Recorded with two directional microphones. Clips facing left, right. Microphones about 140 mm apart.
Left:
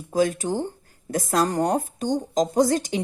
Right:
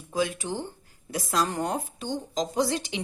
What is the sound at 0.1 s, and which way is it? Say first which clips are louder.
A woman's voice: left 6 dB; 45° left (ahead or behind).